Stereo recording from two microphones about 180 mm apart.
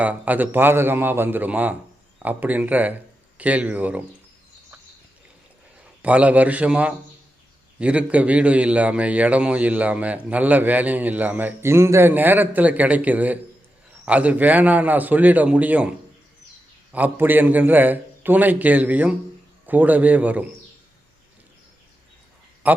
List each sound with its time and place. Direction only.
0.0 s a man's voice: 10° right (ahead or behind)
6.0 s a man's voice: 10° right (ahead or behind)
16.9 s a man's voice: 10° right (ahead or behind)
22.6 s speech: 10° right (ahead or behind)